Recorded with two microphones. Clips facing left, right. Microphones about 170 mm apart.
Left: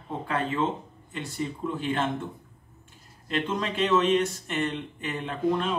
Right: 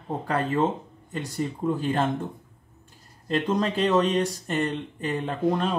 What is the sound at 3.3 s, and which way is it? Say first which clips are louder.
Speech: right 4 dB; 35° right (ahead or behind).